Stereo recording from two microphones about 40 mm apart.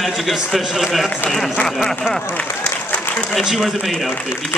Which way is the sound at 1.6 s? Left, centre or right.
Left.